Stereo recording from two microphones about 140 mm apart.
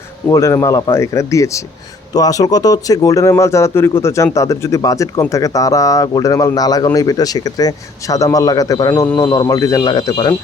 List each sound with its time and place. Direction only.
0.3 s speech: 20° left (ahead or behind)